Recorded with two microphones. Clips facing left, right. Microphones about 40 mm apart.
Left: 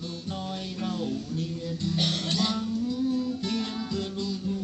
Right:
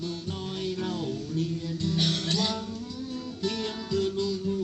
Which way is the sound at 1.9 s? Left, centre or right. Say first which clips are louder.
Even; left.